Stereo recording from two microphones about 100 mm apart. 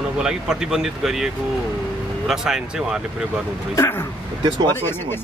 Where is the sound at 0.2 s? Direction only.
5° right (ahead or behind).